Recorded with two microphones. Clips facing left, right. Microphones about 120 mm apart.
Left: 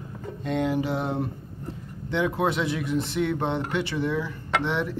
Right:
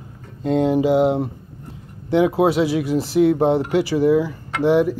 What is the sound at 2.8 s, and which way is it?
Speech, 90° right.